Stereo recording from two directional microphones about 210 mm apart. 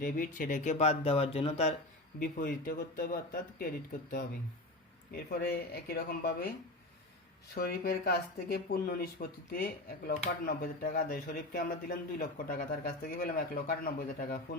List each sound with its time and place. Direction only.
0.0 s speech: 40° left (ahead or behind)
2.1 s speech: 40° left (ahead or behind)
7.5 s speech: 45° left (ahead or behind)